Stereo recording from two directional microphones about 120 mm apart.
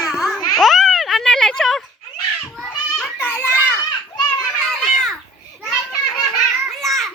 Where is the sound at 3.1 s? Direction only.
20° left (ahead or behind).